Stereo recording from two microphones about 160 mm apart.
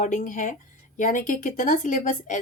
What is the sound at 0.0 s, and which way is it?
A woman's voice, 55° left (ahead or behind).